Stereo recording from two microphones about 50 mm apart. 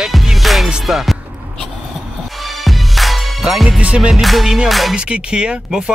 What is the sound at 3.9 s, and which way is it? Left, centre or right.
Music, centre.